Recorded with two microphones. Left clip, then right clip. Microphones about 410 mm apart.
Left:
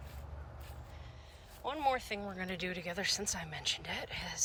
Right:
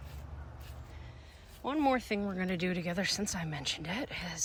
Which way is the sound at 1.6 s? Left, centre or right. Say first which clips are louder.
Right 3 dB; centre.